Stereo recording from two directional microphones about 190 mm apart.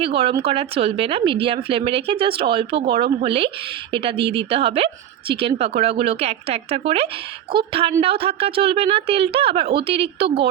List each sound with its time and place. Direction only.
0.0 s speech: 30° right (ahead or behind)
7.5 s a woman's voice: 50° right (ahead or behind)
8.0 s a woman's voice: 30° right (ahead or behind)